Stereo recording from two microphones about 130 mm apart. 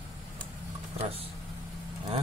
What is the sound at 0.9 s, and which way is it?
Speech, 50° right (ahead or behind).